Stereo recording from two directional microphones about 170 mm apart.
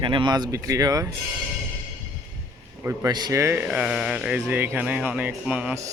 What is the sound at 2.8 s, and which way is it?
Speech, 20° right (ahead or behind).